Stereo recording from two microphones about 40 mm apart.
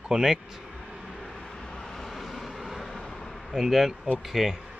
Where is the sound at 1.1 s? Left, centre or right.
Centre.